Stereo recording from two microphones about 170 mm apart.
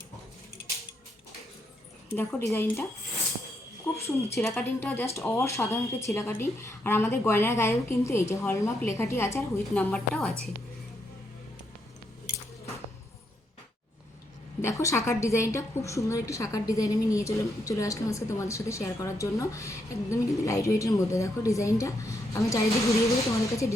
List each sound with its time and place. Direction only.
2.1 s a woman's voice: 15° left (ahead or behind)
4.5 s a woman's voice: 10° left (ahead or behind)
14.6 s a woman's voice: 20° left (ahead or behind)